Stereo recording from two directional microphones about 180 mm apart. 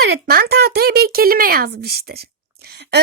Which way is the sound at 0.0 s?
60° right (ahead or behind).